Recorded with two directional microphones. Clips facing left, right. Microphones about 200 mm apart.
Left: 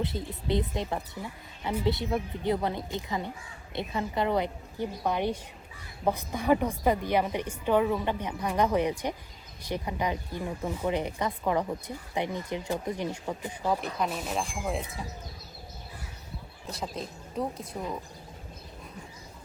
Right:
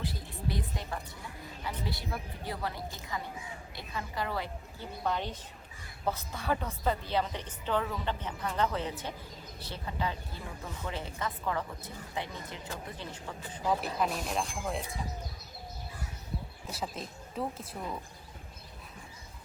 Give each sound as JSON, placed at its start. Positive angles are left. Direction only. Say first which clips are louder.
{"t": 0.0, "sound": "a woman's voice", "louder": "left 4 dB", "side_deg": 20}
{"t": 13.7, "sound": "a woman's voice", "louder": "left 1 dB", "side_deg": 0}
{"t": 16.7, "sound": "a woman's voice", "louder": "left 3 dB", "side_deg": -5}